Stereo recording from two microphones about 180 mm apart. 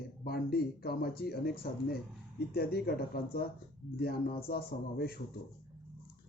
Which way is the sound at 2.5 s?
60° left (ahead or behind).